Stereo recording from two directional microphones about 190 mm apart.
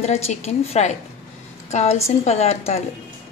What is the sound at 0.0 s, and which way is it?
A woman's voice, 35° left (ahead or behind).